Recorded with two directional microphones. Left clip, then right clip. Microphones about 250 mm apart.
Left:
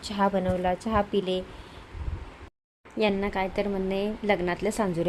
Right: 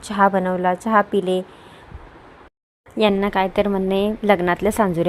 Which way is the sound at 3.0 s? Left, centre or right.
Centre.